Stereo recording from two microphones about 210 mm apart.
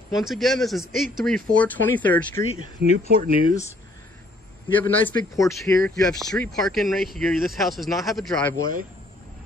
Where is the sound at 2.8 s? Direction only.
50° right (ahead or behind).